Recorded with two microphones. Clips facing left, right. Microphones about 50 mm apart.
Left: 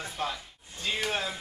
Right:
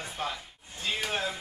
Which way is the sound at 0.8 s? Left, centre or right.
Centre.